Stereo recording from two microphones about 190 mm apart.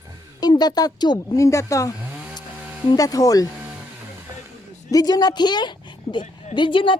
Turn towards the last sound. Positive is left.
turn(degrees=25)  # may be behind; listen again after turning